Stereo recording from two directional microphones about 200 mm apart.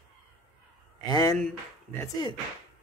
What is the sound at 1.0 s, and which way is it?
Speech, 20° left (ahead or behind).